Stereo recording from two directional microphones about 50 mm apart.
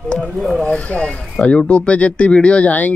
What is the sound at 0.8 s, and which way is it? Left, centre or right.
Speech, left.